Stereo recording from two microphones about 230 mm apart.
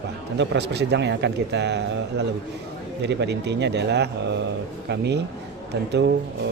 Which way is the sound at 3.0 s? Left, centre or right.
Right.